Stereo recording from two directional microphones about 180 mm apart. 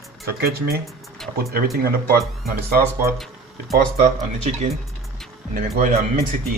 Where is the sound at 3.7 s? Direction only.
40° right (ahead or behind).